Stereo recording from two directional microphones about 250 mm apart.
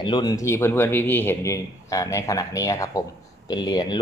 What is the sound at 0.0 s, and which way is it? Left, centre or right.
Speech, centre.